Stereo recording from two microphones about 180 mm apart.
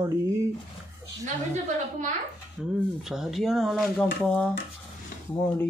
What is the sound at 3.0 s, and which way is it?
Speech, centre (ahead or behind).